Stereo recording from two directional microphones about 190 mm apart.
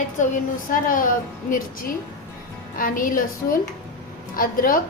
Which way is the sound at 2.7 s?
45° left (ahead or behind).